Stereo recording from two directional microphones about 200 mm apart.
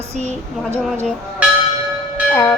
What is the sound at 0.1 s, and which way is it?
Speech, 35° right (ahead or behind).